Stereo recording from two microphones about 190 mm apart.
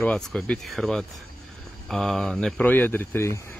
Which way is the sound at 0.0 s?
5° left (ahead or behind).